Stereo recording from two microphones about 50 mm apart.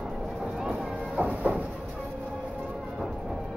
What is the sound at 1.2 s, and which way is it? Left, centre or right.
Train, right.